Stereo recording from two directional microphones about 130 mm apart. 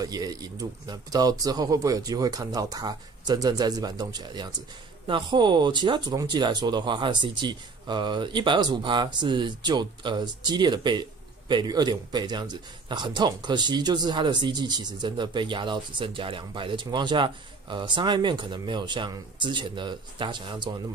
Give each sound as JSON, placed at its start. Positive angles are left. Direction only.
{"t": 0.0, "sound": "speech", "side_deg": -30}